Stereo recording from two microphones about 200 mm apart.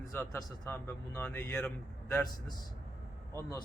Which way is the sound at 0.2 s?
10° left (ahead or behind).